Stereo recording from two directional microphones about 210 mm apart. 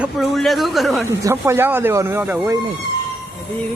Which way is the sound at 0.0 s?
Centre (ahead or behind).